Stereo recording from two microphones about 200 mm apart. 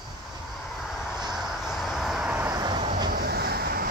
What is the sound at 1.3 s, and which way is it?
Vehicle, centre (ahead or behind).